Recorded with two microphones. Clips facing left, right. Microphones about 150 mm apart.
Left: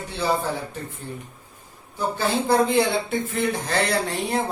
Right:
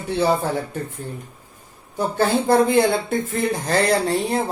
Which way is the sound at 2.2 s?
50° right (ahead or behind).